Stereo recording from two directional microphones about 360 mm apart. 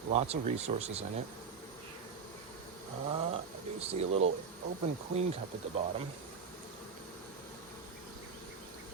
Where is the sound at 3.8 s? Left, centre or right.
Centre.